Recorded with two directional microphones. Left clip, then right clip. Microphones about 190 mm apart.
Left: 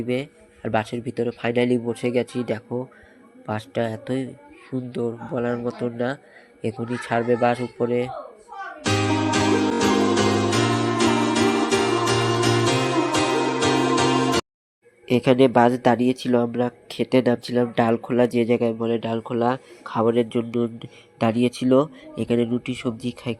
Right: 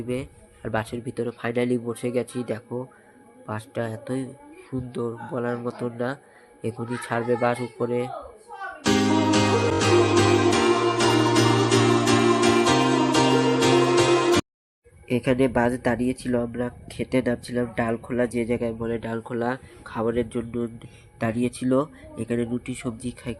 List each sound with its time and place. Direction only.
0.1 s a man's voice: 15° left (ahead or behind)
8.6 s music: centre (ahead or behind)
15.0 s speech: 20° left (ahead or behind)